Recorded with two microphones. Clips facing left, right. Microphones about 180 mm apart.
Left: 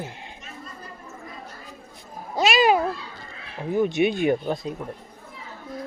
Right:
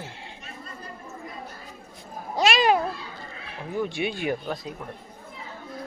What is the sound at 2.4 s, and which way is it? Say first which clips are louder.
Cat: left 2 dB; centre (ahead or behind).